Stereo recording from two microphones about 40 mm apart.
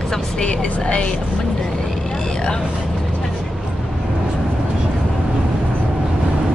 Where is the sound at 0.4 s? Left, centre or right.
Left.